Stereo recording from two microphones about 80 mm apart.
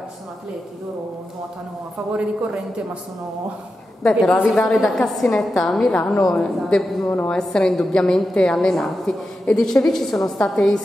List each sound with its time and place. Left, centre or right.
2.1 s speech: centre
4.0 s a woman's voice: centre
7.1 s a woman's voice: centre